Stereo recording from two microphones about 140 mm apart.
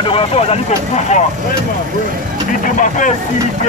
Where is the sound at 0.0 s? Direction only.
40° left (ahead or behind).